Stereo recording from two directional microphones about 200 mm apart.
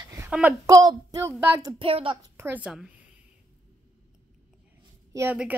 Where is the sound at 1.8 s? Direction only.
25° right (ahead or behind).